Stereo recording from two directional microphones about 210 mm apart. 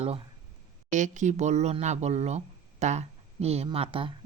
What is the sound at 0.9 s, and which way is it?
Speech, 35° right (ahead or behind).